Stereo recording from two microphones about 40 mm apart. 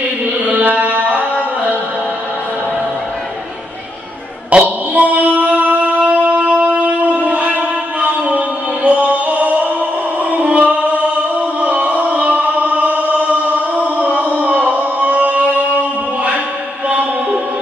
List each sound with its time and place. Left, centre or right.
0.6 s carnatic music: right
4.5 s a sound: right
5.6 s wind instrument: right
10.3 s music: right
11.6 s a sound: right
16.9 s music: right